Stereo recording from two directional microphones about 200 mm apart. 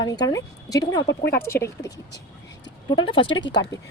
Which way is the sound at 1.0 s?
55° left (ahead or behind).